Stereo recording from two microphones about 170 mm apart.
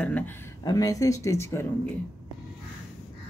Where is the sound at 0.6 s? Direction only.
20° left (ahead or behind).